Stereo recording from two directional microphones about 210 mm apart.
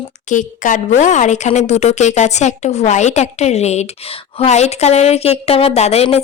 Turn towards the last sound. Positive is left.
turn(degrees=30)  # may be behind; listen again after turning